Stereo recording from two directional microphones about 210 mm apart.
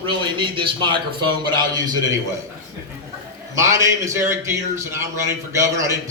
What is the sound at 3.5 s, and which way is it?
A man's voice, 15° right (ahead or behind).